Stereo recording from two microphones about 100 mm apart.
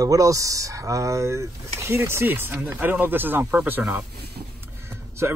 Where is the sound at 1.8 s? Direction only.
25° right (ahead or behind).